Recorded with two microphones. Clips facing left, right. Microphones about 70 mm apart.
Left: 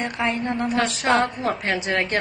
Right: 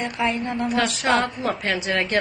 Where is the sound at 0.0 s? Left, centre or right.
Left.